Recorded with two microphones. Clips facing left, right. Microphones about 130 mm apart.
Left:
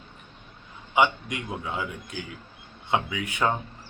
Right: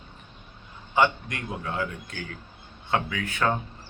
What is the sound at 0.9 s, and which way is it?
A man's voice, 15° left (ahead or behind).